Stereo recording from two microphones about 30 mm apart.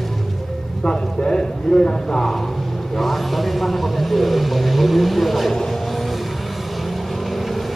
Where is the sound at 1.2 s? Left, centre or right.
Left.